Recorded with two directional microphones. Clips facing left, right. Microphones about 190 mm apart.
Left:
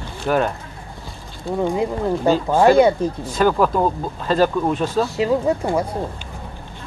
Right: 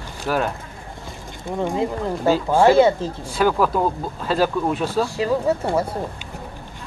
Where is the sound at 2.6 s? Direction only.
15° left (ahead or behind).